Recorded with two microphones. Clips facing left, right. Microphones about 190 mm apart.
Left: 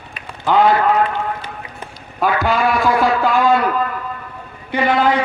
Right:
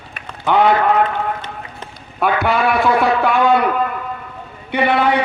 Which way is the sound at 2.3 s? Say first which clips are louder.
Right 1 dB; 65° right (ahead or behind).